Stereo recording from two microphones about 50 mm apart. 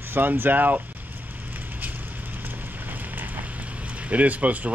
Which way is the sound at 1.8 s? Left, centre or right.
Right.